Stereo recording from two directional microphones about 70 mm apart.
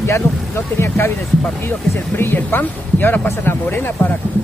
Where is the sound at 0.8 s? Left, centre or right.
Left.